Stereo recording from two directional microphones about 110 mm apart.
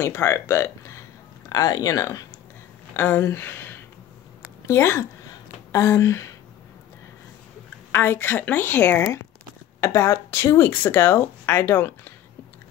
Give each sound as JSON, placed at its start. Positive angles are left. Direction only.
{"t": 0.0, "sound": "speech", "side_deg": 25}
{"t": 7.9, "sound": "speech", "side_deg": 20}